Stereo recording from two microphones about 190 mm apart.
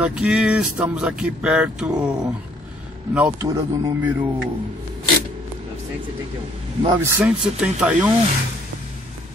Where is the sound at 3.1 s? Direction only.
10° right (ahead or behind).